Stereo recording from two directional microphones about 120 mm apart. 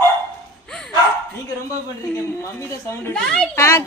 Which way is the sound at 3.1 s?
5° left (ahead or behind).